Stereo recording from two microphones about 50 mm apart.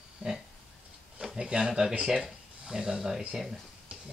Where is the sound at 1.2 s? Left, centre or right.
Centre.